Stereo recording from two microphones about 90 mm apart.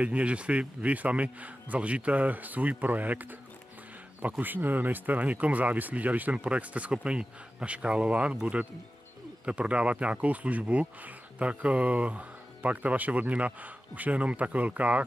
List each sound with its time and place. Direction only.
0.0 s speech: 15° right (ahead or behind)